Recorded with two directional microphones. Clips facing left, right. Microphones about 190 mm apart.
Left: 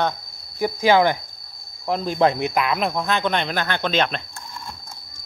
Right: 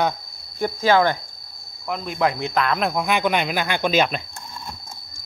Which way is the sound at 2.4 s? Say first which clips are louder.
Even; 10° left (ahead or behind).